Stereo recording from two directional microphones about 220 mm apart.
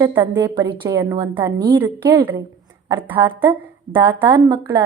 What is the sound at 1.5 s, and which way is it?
Speech, 20° right (ahead or behind).